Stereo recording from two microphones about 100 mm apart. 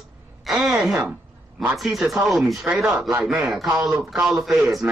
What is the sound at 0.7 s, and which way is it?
Speech, 5° right (ahead or behind).